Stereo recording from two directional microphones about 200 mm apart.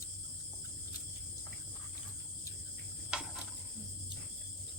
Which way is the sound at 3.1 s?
5° right (ahead or behind).